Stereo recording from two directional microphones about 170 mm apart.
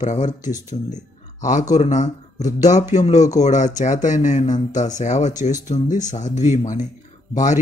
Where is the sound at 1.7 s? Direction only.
45° left (ahead or behind).